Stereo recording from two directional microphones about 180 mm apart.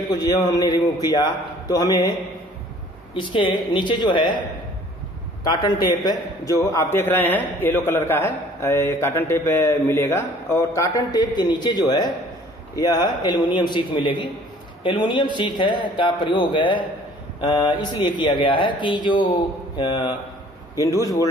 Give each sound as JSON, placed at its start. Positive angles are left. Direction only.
{"t": 0.1, "sound": "speech", "side_deg": 20}
{"t": 3.7, "sound": "a man's voice", "side_deg": 25}